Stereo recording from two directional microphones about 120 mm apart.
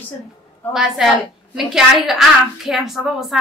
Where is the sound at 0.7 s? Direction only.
5° right (ahead or behind).